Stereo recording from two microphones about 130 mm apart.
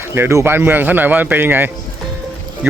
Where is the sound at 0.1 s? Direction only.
20° right (ahead or behind).